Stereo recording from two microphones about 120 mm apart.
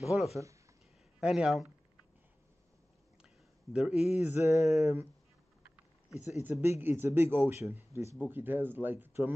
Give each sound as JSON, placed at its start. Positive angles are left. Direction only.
{"t": 0.1, "sound": "speech", "side_deg": 0}
{"t": 3.7, "sound": "speech", "side_deg": -5}
{"t": 4.2, "sound": "speech", "side_deg": -20}
{"t": 6.4, "sound": "speech", "side_deg": -20}